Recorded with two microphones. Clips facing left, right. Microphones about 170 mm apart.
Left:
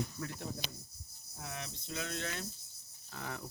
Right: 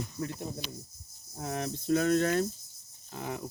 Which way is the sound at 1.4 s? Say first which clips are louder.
Right 11 dB; 40° right (ahead or behind).